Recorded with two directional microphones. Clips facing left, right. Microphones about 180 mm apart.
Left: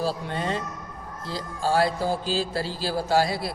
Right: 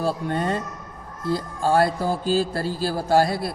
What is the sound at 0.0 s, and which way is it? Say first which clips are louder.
A man's voice: right 4 dB; 50° right (ahead or behind).